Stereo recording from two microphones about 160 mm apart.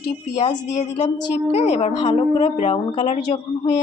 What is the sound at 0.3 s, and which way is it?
A woman's voice, 35° left (ahead or behind).